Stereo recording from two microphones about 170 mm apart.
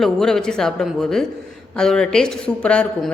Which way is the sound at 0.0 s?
Centre (ahead or behind).